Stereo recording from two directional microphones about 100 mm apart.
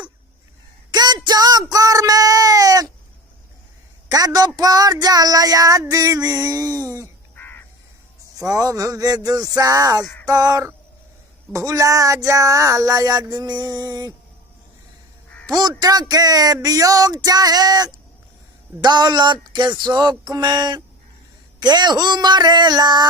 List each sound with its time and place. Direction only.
0.9 s child singing: 45° right (ahead or behind)
4.1 s speech: 40° right (ahead or behind)
7.3 s crow: 20° left (ahead or behind)
8.4 s speech: 35° right (ahead or behind)
15.4 s speech: 40° right (ahead or behind)